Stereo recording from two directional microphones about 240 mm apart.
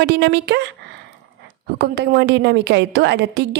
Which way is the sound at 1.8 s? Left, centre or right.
Right.